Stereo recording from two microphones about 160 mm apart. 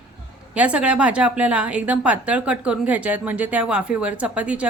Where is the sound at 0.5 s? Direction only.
5° right (ahead or behind).